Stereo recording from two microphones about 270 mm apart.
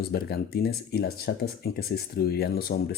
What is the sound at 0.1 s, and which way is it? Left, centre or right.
Speech, left.